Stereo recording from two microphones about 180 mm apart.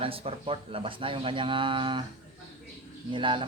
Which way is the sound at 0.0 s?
30° right (ahead or behind).